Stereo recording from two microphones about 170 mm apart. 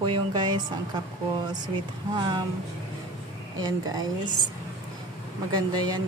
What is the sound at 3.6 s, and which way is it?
Speech, 20° right (ahead or behind).